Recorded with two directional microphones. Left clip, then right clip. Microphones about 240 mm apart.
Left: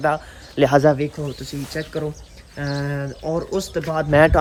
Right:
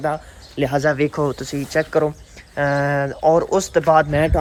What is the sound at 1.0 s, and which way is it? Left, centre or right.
Speech, centre.